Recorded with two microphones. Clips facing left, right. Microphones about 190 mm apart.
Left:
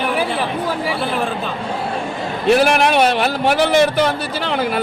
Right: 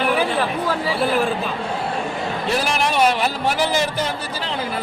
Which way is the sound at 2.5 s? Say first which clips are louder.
Left 9 dB; 60° left (ahead or behind).